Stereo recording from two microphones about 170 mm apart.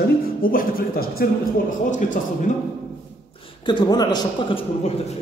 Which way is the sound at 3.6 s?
25° left (ahead or behind).